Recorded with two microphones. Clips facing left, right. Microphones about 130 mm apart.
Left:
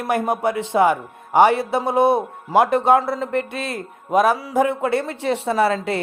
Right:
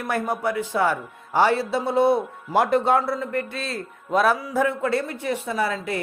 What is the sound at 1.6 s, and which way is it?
Speech, 55° left (ahead or behind).